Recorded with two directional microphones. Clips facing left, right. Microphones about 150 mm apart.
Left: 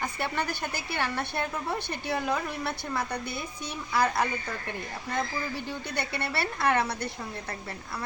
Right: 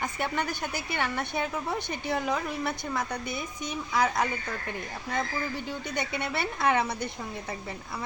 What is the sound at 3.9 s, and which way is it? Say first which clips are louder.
Speech: left 1 dB; 5° left (ahead or behind).